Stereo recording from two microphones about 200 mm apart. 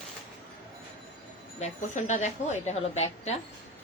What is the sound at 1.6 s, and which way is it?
A woman's voice, 35° left (ahead or behind).